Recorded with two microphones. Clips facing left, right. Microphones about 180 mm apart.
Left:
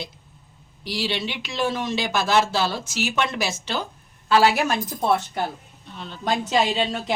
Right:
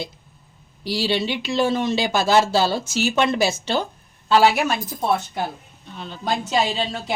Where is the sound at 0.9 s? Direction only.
30° right (ahead or behind).